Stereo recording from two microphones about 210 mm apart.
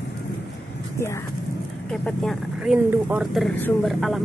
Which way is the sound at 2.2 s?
5° right (ahead or behind).